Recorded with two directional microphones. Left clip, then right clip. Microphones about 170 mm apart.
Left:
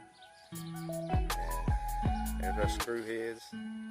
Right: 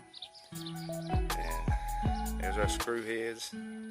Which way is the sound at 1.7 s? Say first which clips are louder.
Even; 10° right (ahead or behind).